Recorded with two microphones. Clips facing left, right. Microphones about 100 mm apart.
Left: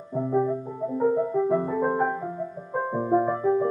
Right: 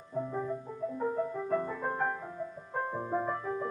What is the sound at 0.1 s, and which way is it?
Music, 20° left (ahead or behind).